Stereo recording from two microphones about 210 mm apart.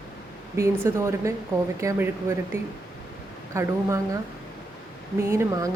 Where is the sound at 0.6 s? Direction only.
15° right (ahead or behind).